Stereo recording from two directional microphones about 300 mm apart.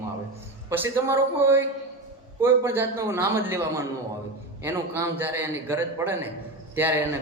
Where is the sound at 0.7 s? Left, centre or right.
Centre.